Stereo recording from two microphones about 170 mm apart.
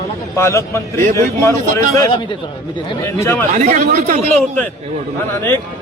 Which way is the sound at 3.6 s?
45° right (ahead or behind).